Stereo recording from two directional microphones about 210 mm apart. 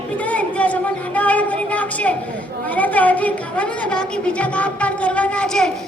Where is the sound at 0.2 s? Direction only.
5° left (ahead or behind).